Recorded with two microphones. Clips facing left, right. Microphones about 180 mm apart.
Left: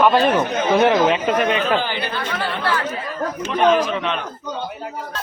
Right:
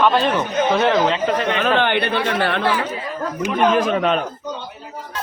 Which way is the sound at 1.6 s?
65° right (ahead or behind).